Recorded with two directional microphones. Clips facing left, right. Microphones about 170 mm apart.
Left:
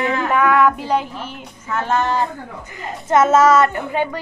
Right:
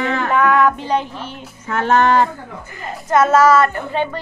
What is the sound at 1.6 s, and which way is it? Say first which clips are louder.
Music: right 5 dB; 75° right (ahead or behind).